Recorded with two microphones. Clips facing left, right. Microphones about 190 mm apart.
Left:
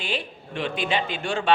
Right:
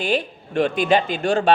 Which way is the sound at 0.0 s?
45° right (ahead or behind).